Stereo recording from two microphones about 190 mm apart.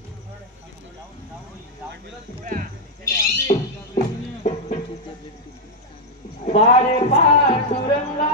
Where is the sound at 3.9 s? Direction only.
35° left (ahead or behind).